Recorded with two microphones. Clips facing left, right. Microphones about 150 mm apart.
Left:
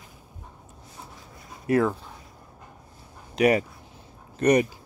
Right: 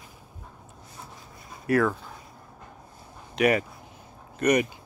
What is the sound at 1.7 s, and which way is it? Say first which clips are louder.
Speech: left 1 dB; 25° left (ahead or behind).